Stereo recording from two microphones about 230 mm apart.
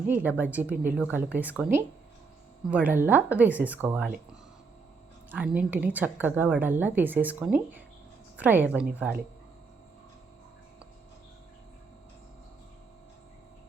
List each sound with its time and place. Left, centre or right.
0.1 s a woman's voice: centre
5.3 s a woman's voice: centre